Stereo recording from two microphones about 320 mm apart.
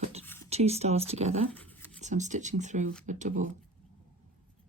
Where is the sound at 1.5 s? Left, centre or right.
Centre.